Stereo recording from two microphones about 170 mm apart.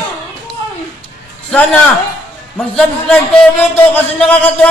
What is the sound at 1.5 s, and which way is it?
A man's voice, 5° left (ahead or behind).